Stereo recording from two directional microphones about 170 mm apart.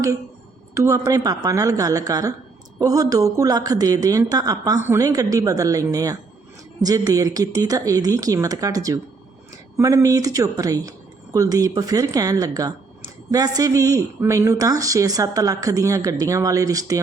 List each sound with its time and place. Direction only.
0.7 s speech: 20° right (ahead or behind)